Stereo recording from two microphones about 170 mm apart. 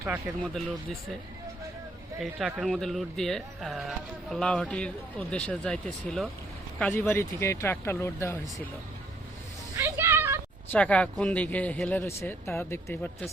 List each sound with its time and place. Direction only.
0.0 s speech: 15° right (ahead or behind)
2.2 s speech: centre (ahead or behind); by 8.6 s 15° left (ahead or behind)
9.7 s a sound: 15° right (ahead or behind)
10.7 s speech: 5° left (ahead or behind)